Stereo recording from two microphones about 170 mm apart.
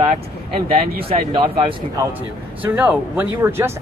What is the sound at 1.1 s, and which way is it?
Speech, 30° right (ahead or behind).